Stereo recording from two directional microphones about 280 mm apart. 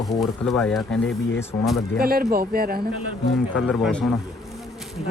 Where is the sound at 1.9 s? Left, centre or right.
Right.